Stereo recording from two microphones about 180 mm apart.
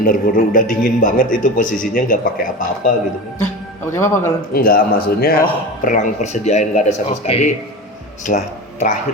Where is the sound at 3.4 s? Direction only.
15° left (ahead or behind).